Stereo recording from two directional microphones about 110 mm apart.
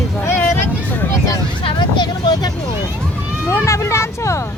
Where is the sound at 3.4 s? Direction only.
25° left (ahead or behind).